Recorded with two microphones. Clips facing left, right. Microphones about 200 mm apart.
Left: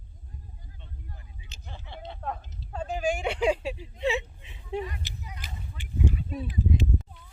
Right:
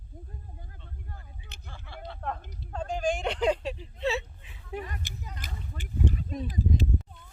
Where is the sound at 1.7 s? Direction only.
20° left (ahead or behind).